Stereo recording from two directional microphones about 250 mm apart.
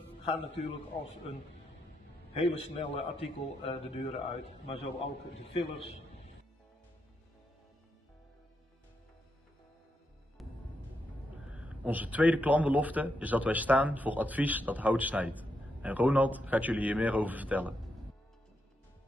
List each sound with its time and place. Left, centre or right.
0.2 s a man's voice: left
2.4 s a man's voice: left
5.4 s a man's voice: left
10.4 s music: centre
11.7 s a man's voice: centre